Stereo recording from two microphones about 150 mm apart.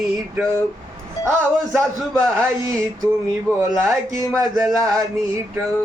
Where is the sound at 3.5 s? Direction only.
15° right (ahead or behind).